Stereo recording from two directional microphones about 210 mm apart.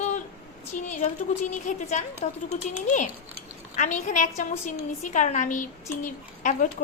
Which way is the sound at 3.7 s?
35° left (ahead or behind).